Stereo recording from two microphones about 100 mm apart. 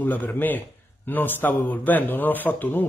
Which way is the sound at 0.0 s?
20° left (ahead or behind).